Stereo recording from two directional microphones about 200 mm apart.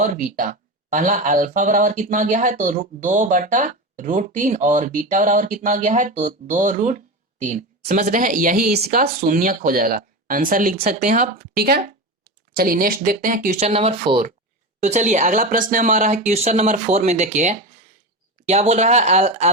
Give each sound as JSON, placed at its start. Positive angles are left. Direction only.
{"t": 0.0, "sound": "speech", "side_deg": -40}